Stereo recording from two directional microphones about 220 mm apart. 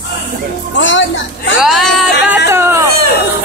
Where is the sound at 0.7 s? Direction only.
55° left (ahead or behind).